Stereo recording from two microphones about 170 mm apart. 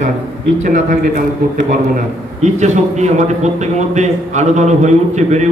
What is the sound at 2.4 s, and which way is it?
A man's voice, 40° right (ahead or behind).